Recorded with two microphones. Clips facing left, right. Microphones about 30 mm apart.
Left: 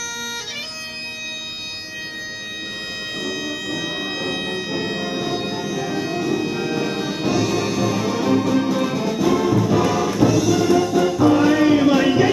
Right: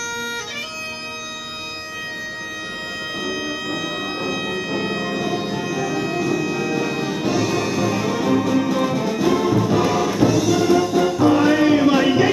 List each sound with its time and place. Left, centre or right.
4.2 s music: left
5.5 s music: centre
6.4 s music: left
6.8 s music: centre